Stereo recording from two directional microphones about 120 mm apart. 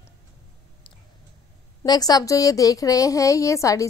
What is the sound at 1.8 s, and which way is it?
A woman's voice, 35° left (ahead or behind).